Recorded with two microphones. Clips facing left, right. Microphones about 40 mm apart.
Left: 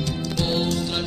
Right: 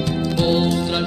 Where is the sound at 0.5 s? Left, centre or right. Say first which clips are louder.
Right 4 dB; centre.